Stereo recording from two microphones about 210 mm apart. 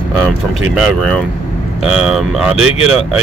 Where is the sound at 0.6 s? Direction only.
Centre (ahead or behind).